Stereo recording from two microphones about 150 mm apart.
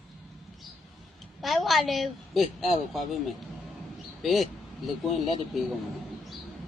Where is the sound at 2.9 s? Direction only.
Centre (ahead or behind).